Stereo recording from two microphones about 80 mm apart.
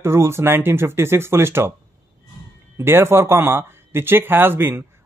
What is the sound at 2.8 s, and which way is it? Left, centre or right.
Speech, right.